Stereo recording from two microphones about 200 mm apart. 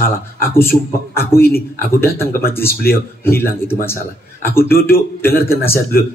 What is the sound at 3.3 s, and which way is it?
A man's voice, 10° left (ahead or behind).